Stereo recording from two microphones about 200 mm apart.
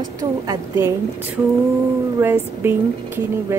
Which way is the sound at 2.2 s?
10° right (ahead or behind).